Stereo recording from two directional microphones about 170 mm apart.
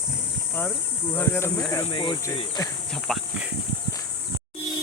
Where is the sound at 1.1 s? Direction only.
15° left (ahead or behind); by 2.5 s 30° left (ahead or behind).